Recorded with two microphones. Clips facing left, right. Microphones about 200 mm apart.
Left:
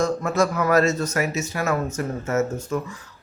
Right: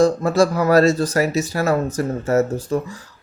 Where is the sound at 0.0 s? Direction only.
30° right (ahead or behind).